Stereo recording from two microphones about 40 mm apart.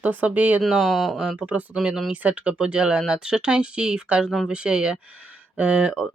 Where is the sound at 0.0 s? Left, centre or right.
Right.